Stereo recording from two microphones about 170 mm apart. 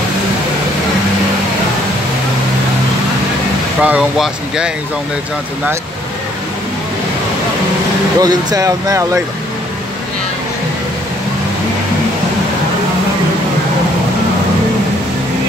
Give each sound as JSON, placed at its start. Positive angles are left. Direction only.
{"t": 3.8, "sound": "speech", "side_deg": -5}
{"t": 8.2, "sound": "speech", "side_deg": -25}